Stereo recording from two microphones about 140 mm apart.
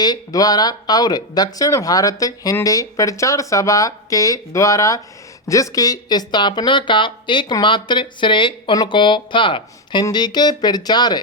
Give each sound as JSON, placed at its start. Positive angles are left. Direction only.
{"t": 0.0, "sound": "speech", "side_deg": 25}